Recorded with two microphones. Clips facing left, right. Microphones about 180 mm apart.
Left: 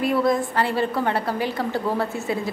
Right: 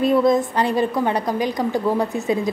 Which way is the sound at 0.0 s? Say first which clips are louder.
Right 4 dB; 20° right (ahead or behind).